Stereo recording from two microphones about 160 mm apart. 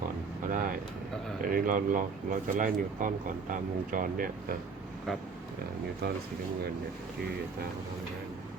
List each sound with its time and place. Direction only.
0.4 s vehicle: 60° right (ahead or behind)
1.4 s speech: 55° right (ahead or behind)